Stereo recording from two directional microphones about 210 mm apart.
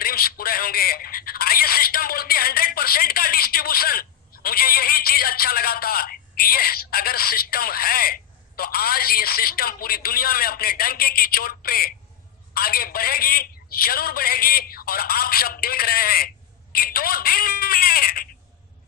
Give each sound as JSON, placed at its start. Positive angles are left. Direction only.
{"t": 0.0, "sound": "telephone", "side_deg": 45}
{"t": 4.4, "sound": "speech", "side_deg": 45}